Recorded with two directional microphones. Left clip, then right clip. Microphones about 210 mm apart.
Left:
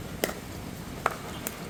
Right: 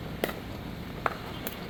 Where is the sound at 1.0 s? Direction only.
55° left (ahead or behind).